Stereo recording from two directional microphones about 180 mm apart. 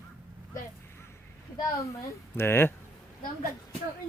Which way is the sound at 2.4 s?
10° left (ahead or behind).